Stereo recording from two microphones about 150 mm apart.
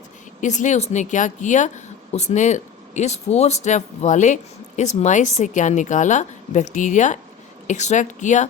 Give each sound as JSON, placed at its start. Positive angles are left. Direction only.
{"t": 0.4, "sound": "a woman's voice", "side_deg": 55}